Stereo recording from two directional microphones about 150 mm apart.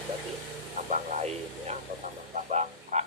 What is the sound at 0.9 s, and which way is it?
Music, 50° right (ahead or behind).